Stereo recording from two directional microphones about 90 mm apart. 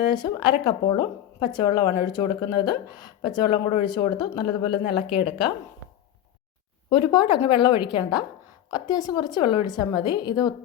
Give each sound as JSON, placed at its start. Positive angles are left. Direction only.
{"t": 0.0, "sound": "a woman's voice", "side_deg": 55}
{"t": 6.9, "sound": "a woman's voice", "side_deg": 60}
{"t": 8.7, "sound": "a woman's voice", "side_deg": 45}